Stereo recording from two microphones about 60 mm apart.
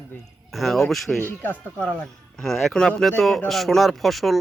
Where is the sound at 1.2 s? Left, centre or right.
Left.